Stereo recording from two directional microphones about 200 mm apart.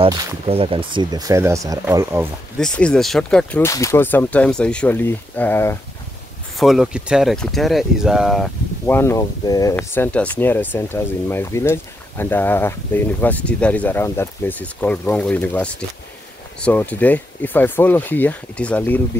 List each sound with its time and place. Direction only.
0.0 s speech: 30° right (ahead or behind)
2.6 s speech: 5° left (ahead or behind)
6.5 s speech: centre (ahead or behind)
8.8 s speech: 10° left (ahead or behind)